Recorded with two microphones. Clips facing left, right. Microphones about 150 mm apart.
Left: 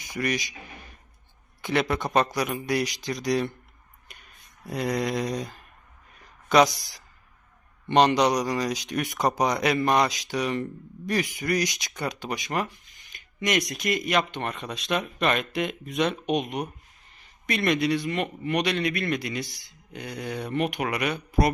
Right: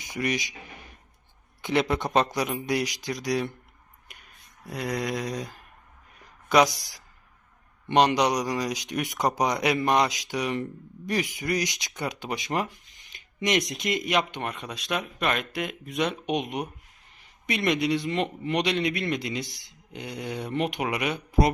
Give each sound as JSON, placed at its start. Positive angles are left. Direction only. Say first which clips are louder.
{"t": 0.0, "sound": "speech", "louder": "even", "side_deg": -20}
{"t": 1.6, "sound": "speech", "louder": "right 1 dB", "side_deg": -20}
{"t": 4.1, "sound": "a sound", "louder": "left 1 dB", "side_deg": -5}
{"t": 4.6, "sound": "mantra", "louder": "left 3 dB", "side_deg": 0}
{"t": 6.5, "sound": "speech", "louder": "left 1 dB", "side_deg": -10}
{"t": 16.2, "sound": "speech", "louder": "left 2 dB", "side_deg": -20}